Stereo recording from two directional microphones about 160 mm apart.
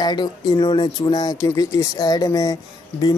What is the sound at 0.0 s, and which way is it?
Speech, 25° left (ahead or behind).